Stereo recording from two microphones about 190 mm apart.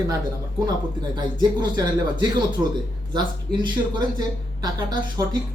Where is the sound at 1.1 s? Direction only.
25° right (ahead or behind).